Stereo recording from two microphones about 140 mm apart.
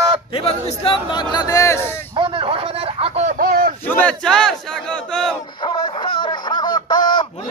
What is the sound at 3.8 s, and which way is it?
Battle cry, 10° left (ahead or behind).